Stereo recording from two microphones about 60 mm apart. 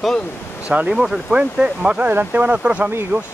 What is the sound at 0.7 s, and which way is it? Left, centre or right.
Speech, centre.